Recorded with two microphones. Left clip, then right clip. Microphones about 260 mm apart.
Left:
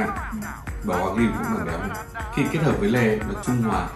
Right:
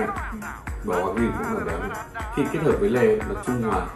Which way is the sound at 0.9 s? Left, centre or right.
Centre.